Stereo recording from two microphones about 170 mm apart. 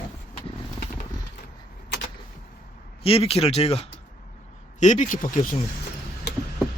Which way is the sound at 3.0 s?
35° left (ahead or behind).